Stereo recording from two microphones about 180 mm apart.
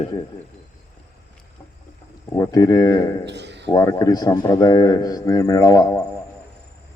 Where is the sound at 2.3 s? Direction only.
20° left (ahead or behind).